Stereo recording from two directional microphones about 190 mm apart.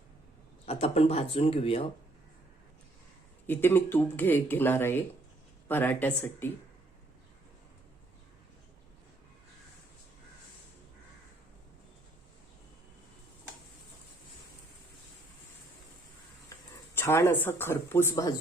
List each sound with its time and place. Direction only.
0.6 s speech: 30° left (ahead or behind)
3.4 s speech: 10° left (ahead or behind)
16.9 s speech: 10° left (ahead or behind)